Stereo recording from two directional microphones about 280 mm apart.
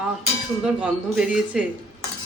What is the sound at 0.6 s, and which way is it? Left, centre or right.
A man's voice, centre.